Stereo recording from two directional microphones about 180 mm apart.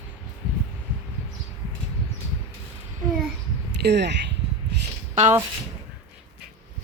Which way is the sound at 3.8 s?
70° right (ahead or behind).